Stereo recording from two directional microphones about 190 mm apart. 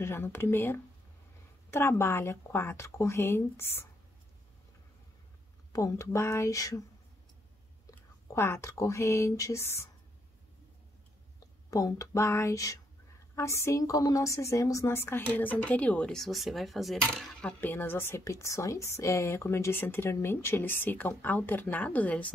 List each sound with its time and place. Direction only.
0.0 s a woman's voice: 10° left (ahead or behind)
5.7 s a woman's voice: 15° left (ahead or behind)
7.9 s speech: 15° left (ahead or behind)
11.3 s a woman's voice: 20° left (ahead or behind)